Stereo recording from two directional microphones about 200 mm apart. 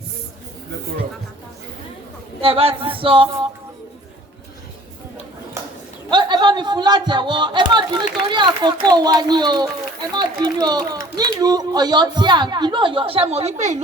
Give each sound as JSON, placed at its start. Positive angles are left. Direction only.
{"t": 2.4, "sound": "speech", "side_deg": -30}
{"t": 5.6, "sound": "a sound", "side_deg": -15}
{"t": 6.1, "sound": "speech", "side_deg": -20}